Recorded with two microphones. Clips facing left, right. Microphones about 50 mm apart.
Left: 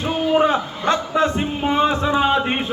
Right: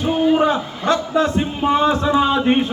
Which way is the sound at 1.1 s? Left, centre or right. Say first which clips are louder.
Right 1 dB; centre.